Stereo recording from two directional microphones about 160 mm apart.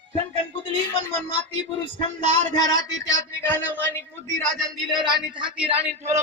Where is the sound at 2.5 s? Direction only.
25° left (ahead or behind).